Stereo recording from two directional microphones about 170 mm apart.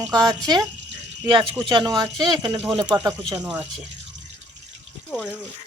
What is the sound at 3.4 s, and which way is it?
Speech, 10° right (ahead or behind).